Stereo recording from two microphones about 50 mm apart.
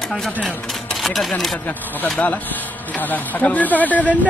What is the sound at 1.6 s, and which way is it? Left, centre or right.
Speech, left.